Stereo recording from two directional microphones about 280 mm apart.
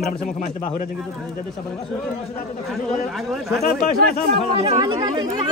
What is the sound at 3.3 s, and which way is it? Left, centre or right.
Speech, centre.